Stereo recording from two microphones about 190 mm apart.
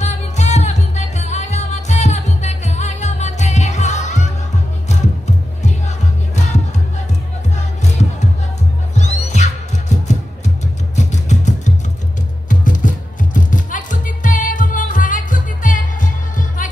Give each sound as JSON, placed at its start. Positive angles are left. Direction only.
{"t": 0.0, "sound": "music", "side_deg": 40}